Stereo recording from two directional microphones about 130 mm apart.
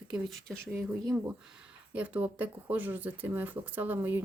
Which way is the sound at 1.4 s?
10° right (ahead or behind).